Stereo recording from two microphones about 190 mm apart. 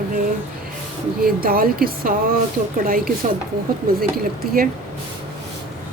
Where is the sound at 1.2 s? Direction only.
50° right (ahead or behind).